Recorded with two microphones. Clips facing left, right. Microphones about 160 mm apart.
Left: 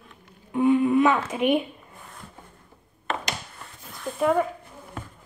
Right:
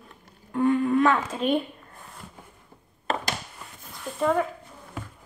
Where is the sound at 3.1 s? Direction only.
35° right (ahead or behind).